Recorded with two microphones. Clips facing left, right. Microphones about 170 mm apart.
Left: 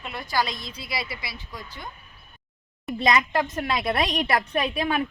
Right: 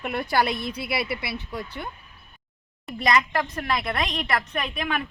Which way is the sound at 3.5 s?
25° left (ahead or behind).